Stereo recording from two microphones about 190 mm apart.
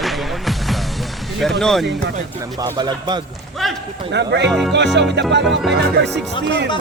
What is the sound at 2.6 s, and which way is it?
Speech, 20° right (ahead or behind).